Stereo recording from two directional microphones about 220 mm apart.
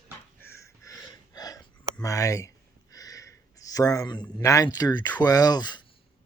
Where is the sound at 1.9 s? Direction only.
15° left (ahead or behind).